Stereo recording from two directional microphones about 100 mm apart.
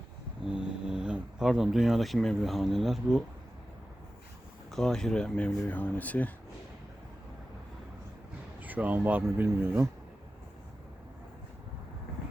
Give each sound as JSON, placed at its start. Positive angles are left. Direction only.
{"t": 0.4, "sound": "speech", "side_deg": -5}
{"t": 4.7, "sound": "speech", "side_deg": 5}
{"t": 8.6, "sound": "speech", "side_deg": -15}